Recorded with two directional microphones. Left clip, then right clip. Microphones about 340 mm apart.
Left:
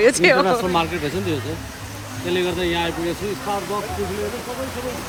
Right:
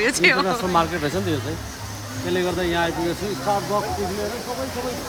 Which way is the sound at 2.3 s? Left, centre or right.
Right.